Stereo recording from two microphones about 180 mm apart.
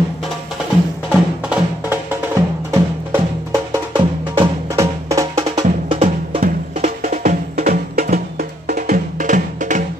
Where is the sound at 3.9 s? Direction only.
20° right (ahead or behind).